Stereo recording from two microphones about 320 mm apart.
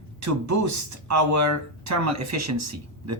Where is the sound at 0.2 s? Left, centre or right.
Right.